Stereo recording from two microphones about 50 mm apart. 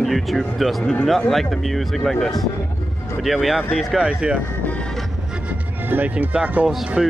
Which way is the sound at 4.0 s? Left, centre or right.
Right.